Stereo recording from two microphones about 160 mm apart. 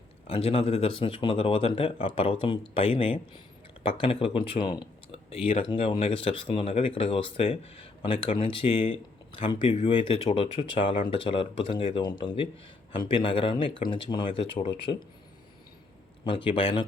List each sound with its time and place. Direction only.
0.3 s speech: 35° left (ahead or behind)
16.2 s speech: 35° left (ahead or behind)